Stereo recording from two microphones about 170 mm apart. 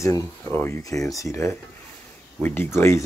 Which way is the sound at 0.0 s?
15° left (ahead or behind).